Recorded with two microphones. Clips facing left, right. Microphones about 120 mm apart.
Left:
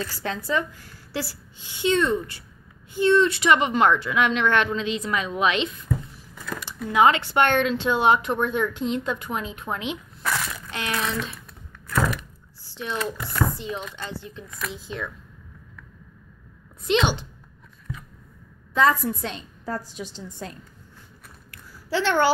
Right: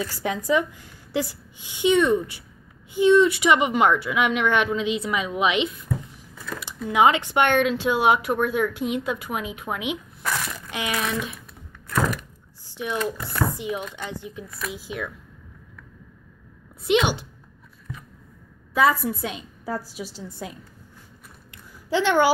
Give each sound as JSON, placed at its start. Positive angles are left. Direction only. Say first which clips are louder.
{"t": 0.2, "sound": "speech", "louder": "right 4 dB", "side_deg": -15}
{"t": 12.6, "sound": "speech", "louder": "right 2 dB", "side_deg": -15}
{"t": 16.8, "sound": "speech", "louder": "right 1 dB", "side_deg": -10}
{"t": 18.7, "sound": "a woman's voice", "louder": "even", "side_deg": -10}
{"t": 21.5, "sound": "a sound", "louder": "right 2 dB", "side_deg": -15}